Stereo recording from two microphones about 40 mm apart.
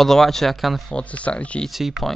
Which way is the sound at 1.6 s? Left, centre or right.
Centre.